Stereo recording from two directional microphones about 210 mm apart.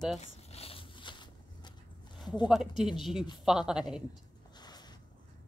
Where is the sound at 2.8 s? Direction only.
Centre (ahead or behind).